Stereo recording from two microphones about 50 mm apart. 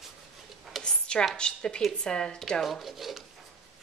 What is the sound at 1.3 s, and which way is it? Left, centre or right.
A woman's voice, centre.